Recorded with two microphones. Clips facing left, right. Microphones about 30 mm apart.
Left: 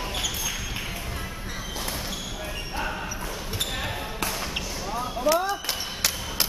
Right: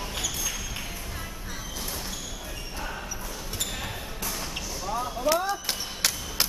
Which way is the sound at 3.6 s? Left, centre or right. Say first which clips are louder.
Left 4 dB; left.